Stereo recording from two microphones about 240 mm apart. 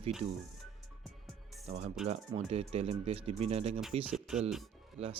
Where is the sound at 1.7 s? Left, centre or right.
Right.